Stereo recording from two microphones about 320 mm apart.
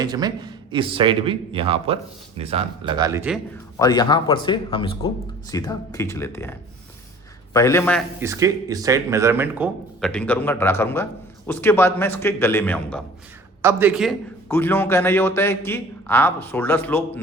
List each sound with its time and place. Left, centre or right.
0.0 s speech: centre
3.8 s speech: centre
8.2 s speech: centre
13.6 s speech: centre